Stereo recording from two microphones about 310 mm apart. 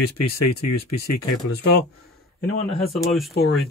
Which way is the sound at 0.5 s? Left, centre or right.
Left.